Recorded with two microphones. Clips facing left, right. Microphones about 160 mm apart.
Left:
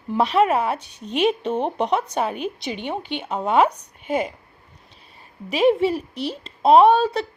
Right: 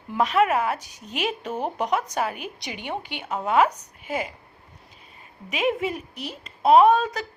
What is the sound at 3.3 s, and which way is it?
Speech, 30° left (ahead or behind).